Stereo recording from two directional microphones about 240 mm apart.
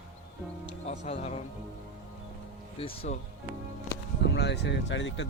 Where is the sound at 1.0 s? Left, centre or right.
Left.